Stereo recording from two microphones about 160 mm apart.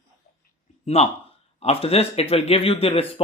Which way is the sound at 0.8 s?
40° left (ahead or behind).